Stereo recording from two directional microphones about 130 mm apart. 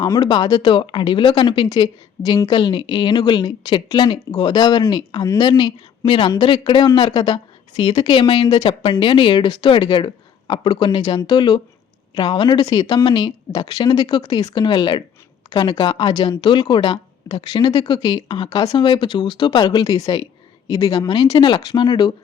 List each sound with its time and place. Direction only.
0.0 s a woman's voice: 35° left (ahead or behind)